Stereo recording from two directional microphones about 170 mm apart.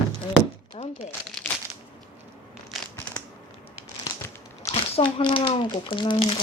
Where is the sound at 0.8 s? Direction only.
35° left (ahead or behind).